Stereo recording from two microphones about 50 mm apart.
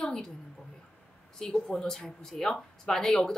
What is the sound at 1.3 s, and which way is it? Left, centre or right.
A woman's voice, centre.